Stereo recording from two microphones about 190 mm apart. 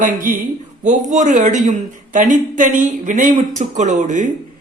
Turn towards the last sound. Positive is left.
turn(degrees=-40)  # may be behind; listen again after turning